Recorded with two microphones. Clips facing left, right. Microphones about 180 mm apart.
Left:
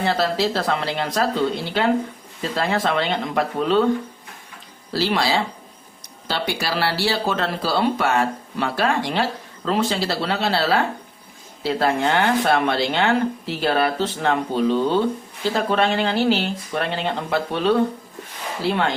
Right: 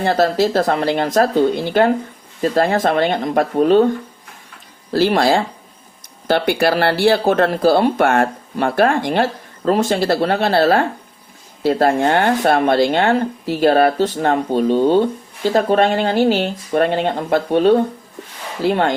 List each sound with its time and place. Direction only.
0.0 s speech: 45° right (ahead or behind)
4.9 s speech: 50° right (ahead or behind)